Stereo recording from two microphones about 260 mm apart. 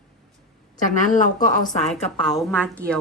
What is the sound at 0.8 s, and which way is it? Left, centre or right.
A woman's voice, left.